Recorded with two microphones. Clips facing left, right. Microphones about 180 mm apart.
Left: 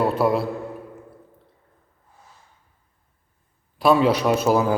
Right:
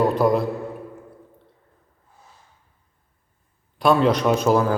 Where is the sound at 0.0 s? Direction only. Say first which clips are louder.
Right 2 dB; 5° left (ahead or behind).